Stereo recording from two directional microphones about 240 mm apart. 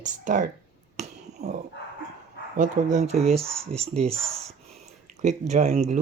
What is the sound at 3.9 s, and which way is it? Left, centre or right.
Speech, right.